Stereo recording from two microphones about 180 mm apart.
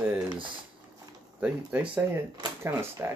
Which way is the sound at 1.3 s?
5° right (ahead or behind).